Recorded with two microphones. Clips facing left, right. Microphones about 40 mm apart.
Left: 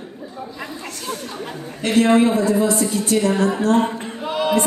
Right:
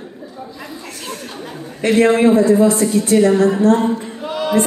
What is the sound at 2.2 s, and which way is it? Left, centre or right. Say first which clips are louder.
A woman's voice: right 6 dB; right.